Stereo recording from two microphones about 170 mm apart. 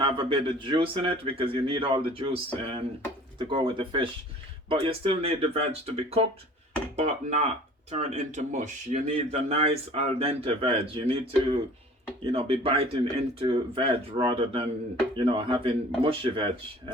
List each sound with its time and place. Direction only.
0.0 s speech: 30° right (ahead or behind)